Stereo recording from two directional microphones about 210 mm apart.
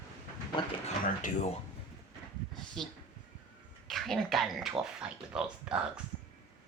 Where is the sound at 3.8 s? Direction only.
Centre (ahead or behind).